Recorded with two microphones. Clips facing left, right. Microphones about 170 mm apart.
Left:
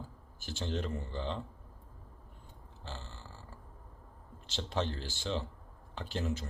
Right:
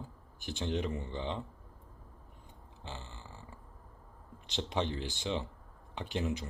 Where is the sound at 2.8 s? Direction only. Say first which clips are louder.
Even; 15° right (ahead or behind).